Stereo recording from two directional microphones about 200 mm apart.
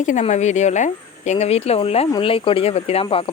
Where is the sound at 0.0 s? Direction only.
35° left (ahead or behind).